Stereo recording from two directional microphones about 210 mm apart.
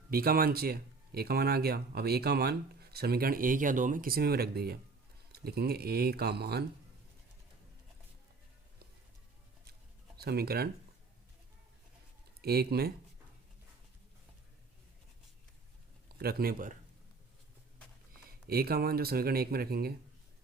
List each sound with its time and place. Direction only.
0.1 s speech: 45° right (ahead or behind)
10.2 s speech: 50° right (ahead or behind)
12.4 s speech: 50° right (ahead or behind)
16.1 s speech: 45° right (ahead or behind)
18.4 s speech: 45° right (ahead or behind)